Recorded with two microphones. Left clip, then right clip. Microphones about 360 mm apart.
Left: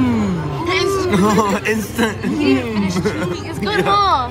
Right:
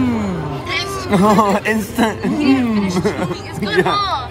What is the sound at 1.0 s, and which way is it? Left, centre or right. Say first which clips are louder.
Speech: right 2 dB; right.